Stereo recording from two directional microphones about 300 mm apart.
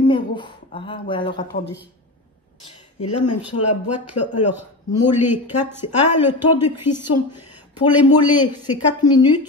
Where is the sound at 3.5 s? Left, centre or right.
Left.